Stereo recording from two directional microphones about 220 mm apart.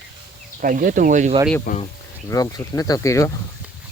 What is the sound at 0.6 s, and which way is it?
Speech, 40° right (ahead or behind).